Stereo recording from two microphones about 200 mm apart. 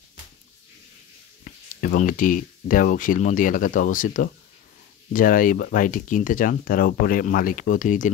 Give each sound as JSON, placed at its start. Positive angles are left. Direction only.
{"t": 1.4, "sound": "speech", "side_deg": 45}